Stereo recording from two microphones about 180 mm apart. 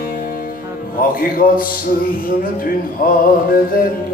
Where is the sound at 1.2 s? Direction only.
50° left (ahead or behind).